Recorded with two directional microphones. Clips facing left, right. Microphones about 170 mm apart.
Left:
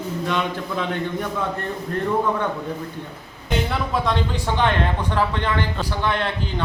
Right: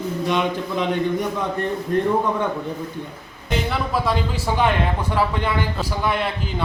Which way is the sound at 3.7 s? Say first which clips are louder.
Right 3 dB; 5° right (ahead or behind).